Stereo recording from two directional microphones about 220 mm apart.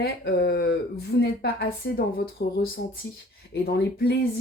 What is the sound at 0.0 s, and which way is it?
Speech, 45° left (ahead or behind).